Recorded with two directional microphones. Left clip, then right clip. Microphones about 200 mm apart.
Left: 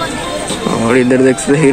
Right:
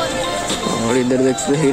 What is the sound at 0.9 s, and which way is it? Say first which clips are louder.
Speech: left 7 dB; 5° right (ahead or behind).